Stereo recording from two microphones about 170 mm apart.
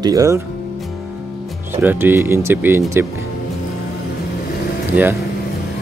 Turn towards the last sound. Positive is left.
turn(degrees=-10)  # may be behind; listen again after turning